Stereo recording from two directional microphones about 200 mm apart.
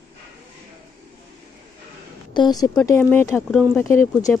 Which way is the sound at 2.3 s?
20° left (ahead or behind).